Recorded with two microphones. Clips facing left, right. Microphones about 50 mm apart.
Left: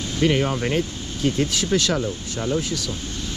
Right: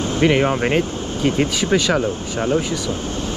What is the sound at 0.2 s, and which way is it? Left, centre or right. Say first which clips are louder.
Speech: right 4 dB; right.